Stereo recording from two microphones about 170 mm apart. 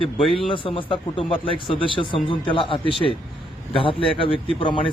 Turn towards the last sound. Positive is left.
turn(degrees=30)  # may be behind; listen again after turning